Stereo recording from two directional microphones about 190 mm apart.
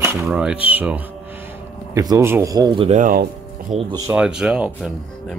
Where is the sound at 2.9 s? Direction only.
45° right (ahead or behind).